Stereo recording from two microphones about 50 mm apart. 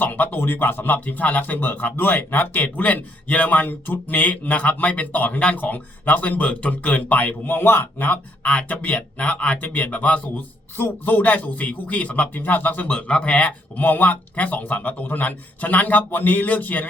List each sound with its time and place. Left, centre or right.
0.0 s speech: left
7.4 s a man's voice: left
8.0 s speech: left
10.8 s speech: left
13.8 s speech: left